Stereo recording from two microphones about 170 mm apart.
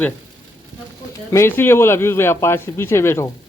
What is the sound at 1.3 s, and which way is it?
Speech, 15° left (ahead or behind).